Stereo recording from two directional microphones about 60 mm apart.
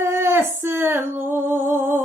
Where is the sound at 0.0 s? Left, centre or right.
Right.